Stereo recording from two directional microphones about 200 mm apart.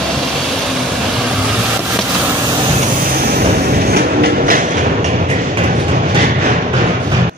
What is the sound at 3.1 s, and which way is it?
Vehicle, 45° right (ahead or behind).